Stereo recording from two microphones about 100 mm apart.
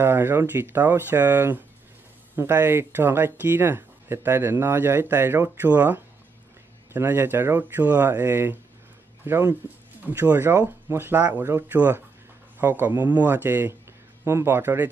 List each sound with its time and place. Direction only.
0.0 s speech: 25° right (ahead or behind)